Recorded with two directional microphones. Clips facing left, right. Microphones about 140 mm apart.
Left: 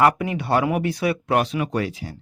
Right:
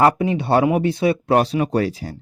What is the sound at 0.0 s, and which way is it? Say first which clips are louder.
Speech: right 2 dB; 25° right (ahead or behind).